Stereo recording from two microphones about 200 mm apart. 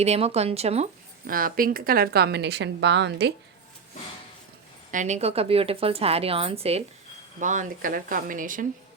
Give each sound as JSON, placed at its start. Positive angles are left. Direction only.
{"t": 0.0, "sound": "speech", "side_deg": -30}
{"t": 1.3, "sound": "speech", "side_deg": -45}
{"t": 4.9, "sound": "a woman's voice", "side_deg": -35}